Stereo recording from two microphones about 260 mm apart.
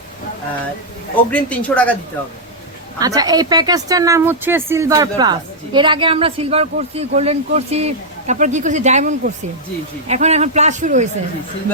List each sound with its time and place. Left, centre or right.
1.3 s speech: centre
3.0 s a woman's voice: centre